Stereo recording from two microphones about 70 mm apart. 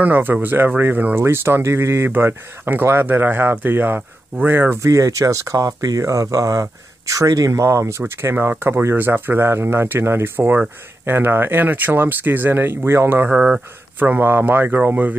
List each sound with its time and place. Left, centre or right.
0.0 s speech: right
4.9 s speech: right
13.3 s speech: centre
13.9 s speech: right